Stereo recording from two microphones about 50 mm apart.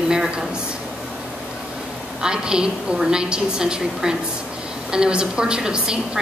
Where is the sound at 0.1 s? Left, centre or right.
Centre.